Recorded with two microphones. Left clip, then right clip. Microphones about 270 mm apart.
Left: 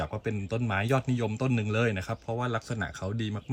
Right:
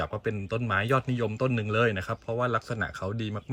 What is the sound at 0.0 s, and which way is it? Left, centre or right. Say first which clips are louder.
Speech: right 2 dB; centre.